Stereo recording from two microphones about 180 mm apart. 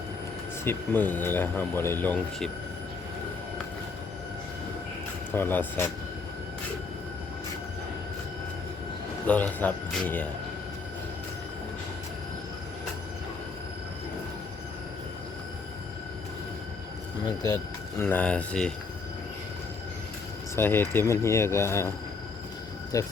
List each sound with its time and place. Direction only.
0.6 s speech: 10° left (ahead or behind)
5.3 s speech: 10° left (ahead or behind)
9.2 s speech: 10° left (ahead or behind)
18.0 s speech: 10° left (ahead or behind)
20.6 s speech: 10° left (ahead or behind)
22.9 s speech: 20° left (ahead or behind)